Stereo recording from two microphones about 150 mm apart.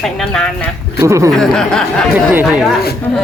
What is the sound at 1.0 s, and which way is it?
Speech, 20° right (ahead or behind).